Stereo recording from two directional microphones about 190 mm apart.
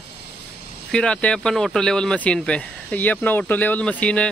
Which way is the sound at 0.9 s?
5° left (ahead or behind).